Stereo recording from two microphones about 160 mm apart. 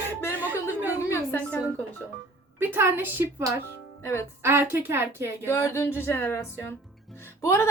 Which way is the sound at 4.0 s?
15° left (ahead or behind).